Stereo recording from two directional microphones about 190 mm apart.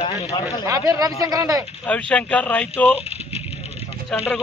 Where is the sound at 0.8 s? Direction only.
20° right (ahead or behind).